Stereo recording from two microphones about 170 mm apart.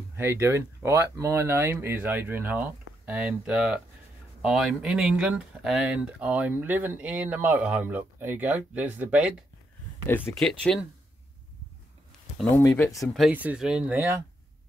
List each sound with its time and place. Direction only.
0.1 s speech: 15° right (ahead or behind)
10.0 s speech: 10° left (ahead or behind)
12.5 s speech: 15° left (ahead or behind)
12.9 s speech: centre (ahead or behind)